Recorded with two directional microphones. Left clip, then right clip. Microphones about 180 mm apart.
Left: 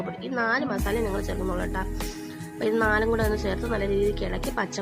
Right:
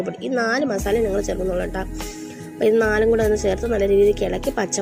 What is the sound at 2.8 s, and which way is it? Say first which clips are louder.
Speech: right 6 dB; 15° right (ahead or behind).